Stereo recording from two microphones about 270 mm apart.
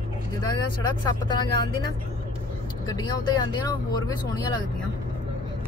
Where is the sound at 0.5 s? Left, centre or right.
Centre.